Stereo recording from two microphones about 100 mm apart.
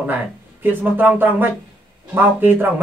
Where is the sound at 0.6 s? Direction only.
20° right (ahead or behind).